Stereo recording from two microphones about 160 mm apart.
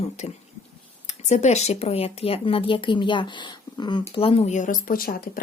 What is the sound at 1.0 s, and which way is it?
Speech, 45° left (ahead or behind).